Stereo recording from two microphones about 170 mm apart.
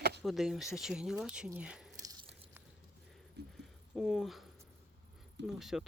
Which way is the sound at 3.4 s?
75° right (ahead or behind).